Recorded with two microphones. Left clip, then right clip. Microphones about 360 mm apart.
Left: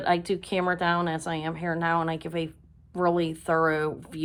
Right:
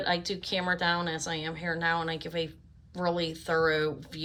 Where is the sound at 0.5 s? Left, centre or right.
Centre.